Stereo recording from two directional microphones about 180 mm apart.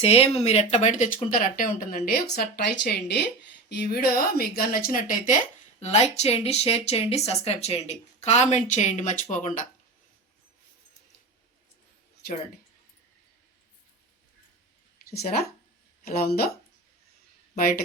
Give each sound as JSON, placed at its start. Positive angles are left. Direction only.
{"t": 0.0, "sound": "speech", "side_deg": 35}
{"t": 15.1, "sound": "speech", "side_deg": 60}